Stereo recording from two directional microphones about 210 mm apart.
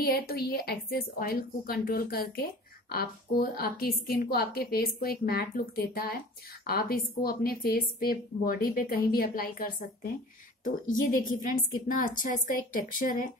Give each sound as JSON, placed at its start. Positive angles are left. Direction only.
{"t": 0.0, "sound": "a woman's voice", "side_deg": 50}